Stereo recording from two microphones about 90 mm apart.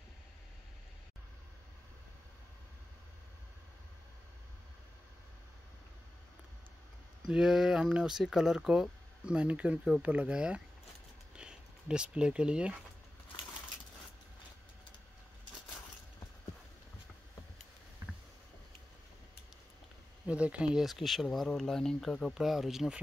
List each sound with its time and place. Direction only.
7.2 s speech: 5° right (ahead or behind)
18.0 s rowboat: 30° right (ahead or behind)
20.2 s speech: 15° right (ahead or behind)